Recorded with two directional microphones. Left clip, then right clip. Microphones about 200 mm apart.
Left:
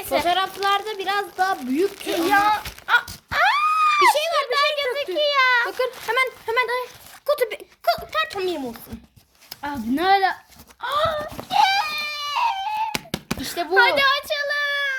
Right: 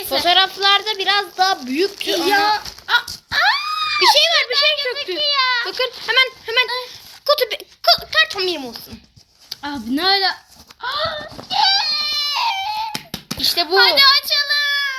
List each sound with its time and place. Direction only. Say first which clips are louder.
0.3 s speech: right 9 dB; 5° left (ahead or behind)
2.5 s dog: right 2 dB; 45° left (ahead or behind)
3.2 s a sound: even; 45° left (ahead or behind)
4.1 s speech: right 7 dB; 15° left (ahead or behind)
4.5 s a child's voice: right 3 dB; 55° left (ahead or behind)
5.6 s speech: right 3 dB; 5° left (ahead or behind)
9.5 s a woman's voice: right 2 dB; 35° left (ahead or behind)
10.8 s speech: even; 50° left (ahead or behind)
11.5 s baby cry: right 2 dB; 45° left (ahead or behind)
13.5 s speech: right 7 dB; 10° left (ahead or behind)
13.7 s a child's voice: right 4 dB; 55° left (ahead or behind)